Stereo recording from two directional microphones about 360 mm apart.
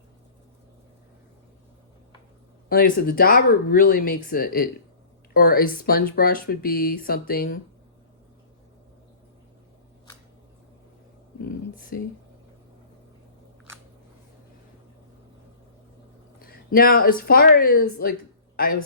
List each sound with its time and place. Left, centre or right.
2.6 s speech: left
11.4 s a sound: left
16.4 s speech: left